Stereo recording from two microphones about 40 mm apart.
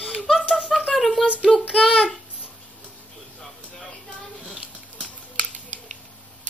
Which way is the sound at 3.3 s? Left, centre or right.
Centre.